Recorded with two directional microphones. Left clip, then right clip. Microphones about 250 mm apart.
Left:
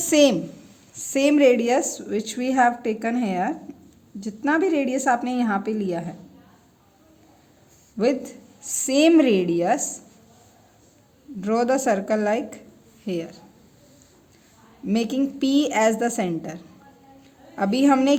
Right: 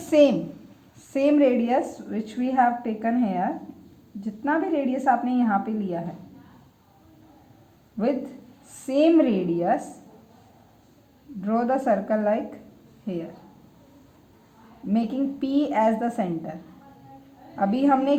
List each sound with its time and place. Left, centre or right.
0.0 s a woman's voice: left
8.0 s a woman's voice: left
8.6 s a woman's voice: left
11.3 s a woman's voice: left
14.8 s a woman's voice: left
17.6 s a woman's voice: left